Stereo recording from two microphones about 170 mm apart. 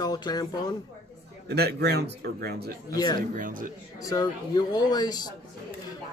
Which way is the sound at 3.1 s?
55° right (ahead or behind).